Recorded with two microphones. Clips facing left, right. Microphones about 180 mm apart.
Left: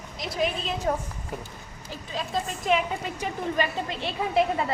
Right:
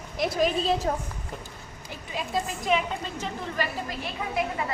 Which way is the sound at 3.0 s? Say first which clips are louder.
Left 3 dB; 15° left (ahead or behind).